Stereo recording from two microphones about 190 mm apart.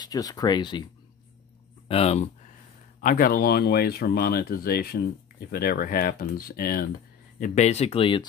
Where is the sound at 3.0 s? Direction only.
50° left (ahead or behind).